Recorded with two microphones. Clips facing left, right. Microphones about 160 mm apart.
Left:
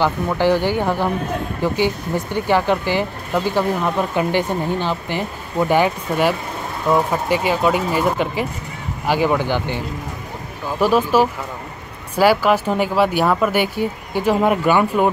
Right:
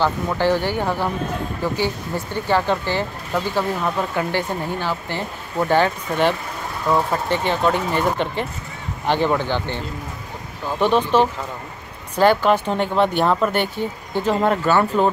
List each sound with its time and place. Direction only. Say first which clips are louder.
0.0 s speech: left 2 dB; 15° left (ahead or behind)
4.1 s speech: left 4 dB; 20° left (ahead or behind)